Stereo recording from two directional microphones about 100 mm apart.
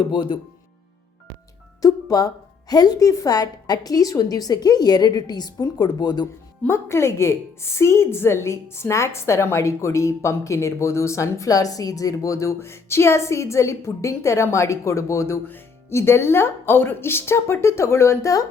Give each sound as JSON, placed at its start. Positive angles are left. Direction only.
{"t": 0.1, "sound": "speech", "side_deg": 50}
{"t": 1.8, "sound": "speech", "side_deg": 40}
{"t": 6.6, "sound": "a woman's voice", "side_deg": 25}